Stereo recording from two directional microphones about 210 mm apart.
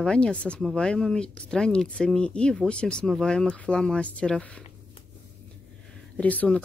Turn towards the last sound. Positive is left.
turn(degrees=5)  # may be behind; listen again after turning